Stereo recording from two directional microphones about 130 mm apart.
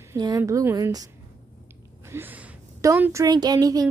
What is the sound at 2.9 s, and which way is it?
Speech, 15° right (ahead or behind).